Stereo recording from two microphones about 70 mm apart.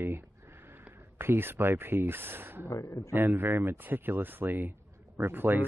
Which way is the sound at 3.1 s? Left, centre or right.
Right.